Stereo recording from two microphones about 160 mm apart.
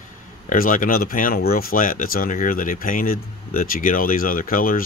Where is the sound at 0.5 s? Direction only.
55° left (ahead or behind).